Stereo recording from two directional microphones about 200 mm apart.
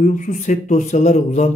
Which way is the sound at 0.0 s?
40° left (ahead or behind).